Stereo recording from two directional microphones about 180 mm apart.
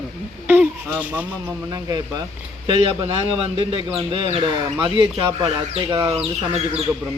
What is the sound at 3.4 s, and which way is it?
Speech, 30° right (ahead or behind).